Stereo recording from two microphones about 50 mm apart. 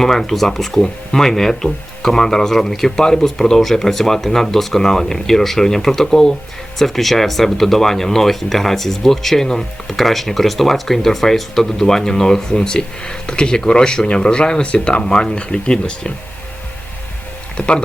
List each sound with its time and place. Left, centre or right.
0.0 s speech: centre
17.6 s speech: centre